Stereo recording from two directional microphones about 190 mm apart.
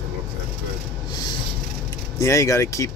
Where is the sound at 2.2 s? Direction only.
15° left (ahead or behind).